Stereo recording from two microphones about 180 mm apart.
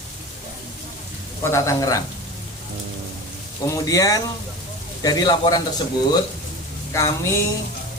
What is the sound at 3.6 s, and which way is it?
Speech, 20° left (ahead or behind).